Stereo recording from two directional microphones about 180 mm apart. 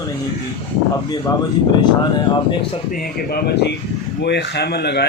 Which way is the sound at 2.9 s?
60° left (ahead or behind).